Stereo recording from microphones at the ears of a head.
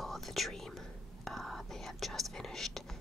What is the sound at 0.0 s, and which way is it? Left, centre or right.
Whispering, centre.